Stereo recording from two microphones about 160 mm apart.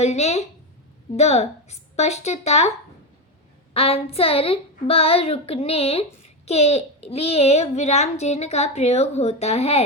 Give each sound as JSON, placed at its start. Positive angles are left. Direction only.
{"t": 0.0, "sound": "a child's voice", "side_deg": 45}
{"t": 3.8, "sound": "a woman's voice", "side_deg": 35}